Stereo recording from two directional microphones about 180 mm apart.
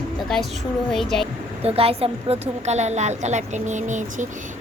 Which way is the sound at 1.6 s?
35° right (ahead or behind).